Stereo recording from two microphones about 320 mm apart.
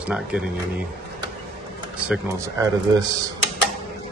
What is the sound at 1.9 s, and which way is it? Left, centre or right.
Speech, centre.